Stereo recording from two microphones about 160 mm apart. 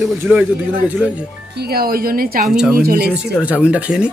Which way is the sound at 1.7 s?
70° right (ahead or behind).